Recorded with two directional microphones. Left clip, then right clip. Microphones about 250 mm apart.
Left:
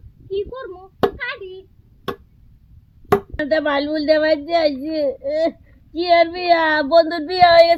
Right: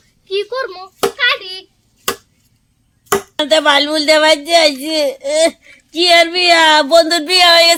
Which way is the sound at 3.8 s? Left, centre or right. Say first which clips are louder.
Right 6 dB; centre.